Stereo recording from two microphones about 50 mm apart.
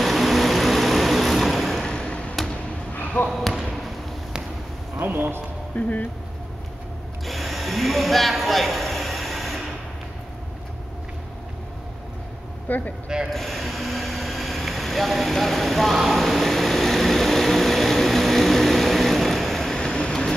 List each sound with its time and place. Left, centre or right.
0.0 s vehicle: centre
1.9 s a sound: centre
2.9 s basketball bounce: left
3.3 s basketball bounce: centre
4.9 s a sound: right
5.8 s speech: left
7.2 s a sound: centre
12.6 s speech: left
13.3 s mechanisms: centre
19.8 s vehicle: centre